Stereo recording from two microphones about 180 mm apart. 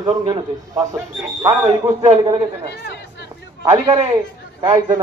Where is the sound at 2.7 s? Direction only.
70° left (ahead or behind).